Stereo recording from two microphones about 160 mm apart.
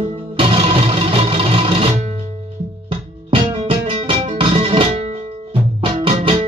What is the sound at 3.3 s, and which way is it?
Music, 35° right (ahead or behind).